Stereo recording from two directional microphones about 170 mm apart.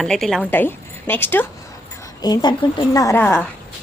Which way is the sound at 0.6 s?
10° left (ahead or behind).